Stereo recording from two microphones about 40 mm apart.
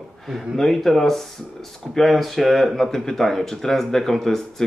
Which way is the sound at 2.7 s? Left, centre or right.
Centre.